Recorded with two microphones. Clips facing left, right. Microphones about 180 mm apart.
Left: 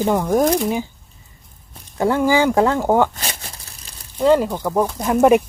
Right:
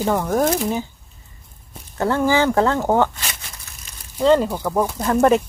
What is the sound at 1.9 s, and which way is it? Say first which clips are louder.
Speech: left 2 dB; 10° left (ahead or behind).